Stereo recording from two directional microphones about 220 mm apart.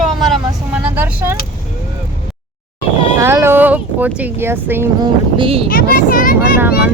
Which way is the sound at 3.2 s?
10° right (ahead or behind).